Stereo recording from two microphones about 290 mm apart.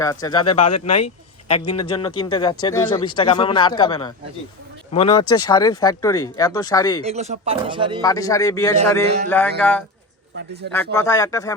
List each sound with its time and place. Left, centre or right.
0.0 s speech: centre
0.6 s speech: left
1.5 s speech: centre
7.0 s speech: right
8.0 s speech: centre
10.3 s speech: right
10.9 s speech: centre